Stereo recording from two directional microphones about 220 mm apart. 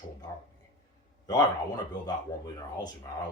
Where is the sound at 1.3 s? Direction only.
15° left (ahead or behind).